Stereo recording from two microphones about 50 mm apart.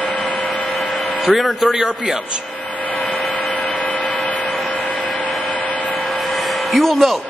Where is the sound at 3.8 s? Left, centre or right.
Left.